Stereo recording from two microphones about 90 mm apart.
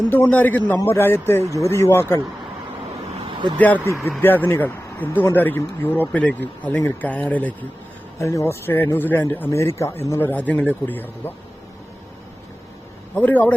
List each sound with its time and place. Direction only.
0.1 s speech: 20° left (ahead or behind)
3.2 s a sound: 70° right (ahead or behind)
4.2 s speech: 20° left (ahead or behind)
8.2 s speech: 35° left (ahead or behind)
13.1 s speech: 20° left (ahead or behind)